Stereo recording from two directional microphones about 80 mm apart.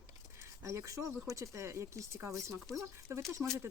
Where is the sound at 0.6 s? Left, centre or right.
Right.